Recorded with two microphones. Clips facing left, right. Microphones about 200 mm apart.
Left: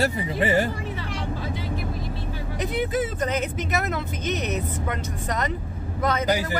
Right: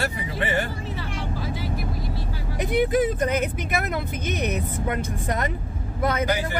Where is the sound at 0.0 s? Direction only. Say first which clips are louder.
Left 4 dB; 35° left (ahead or behind).